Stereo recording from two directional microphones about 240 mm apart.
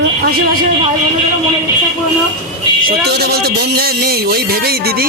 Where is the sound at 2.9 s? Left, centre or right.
Right.